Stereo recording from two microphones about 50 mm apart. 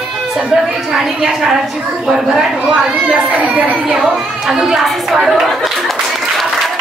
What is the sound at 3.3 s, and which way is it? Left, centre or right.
Speech, right.